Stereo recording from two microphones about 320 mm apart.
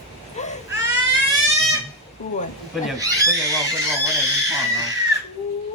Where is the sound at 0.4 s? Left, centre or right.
Left.